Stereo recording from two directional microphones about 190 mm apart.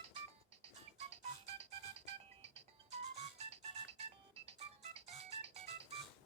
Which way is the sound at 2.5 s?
35° right (ahead or behind).